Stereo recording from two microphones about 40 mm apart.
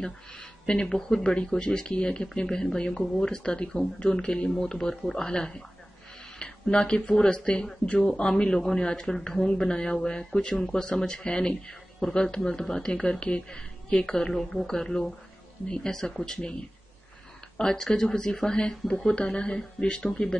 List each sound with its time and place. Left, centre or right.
0.0 s speech: centre
17.6 s speech: centre